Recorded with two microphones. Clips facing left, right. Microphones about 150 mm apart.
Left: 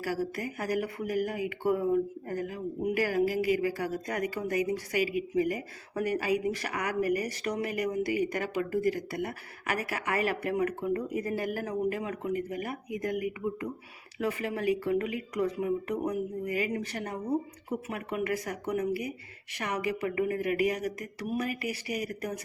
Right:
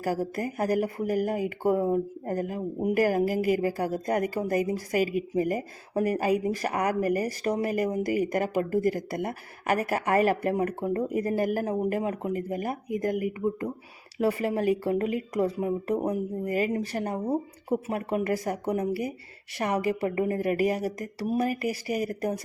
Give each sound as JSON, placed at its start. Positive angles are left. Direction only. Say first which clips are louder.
{"t": 0.0, "sound": "speech", "louder": "right 4 dB", "side_deg": -40}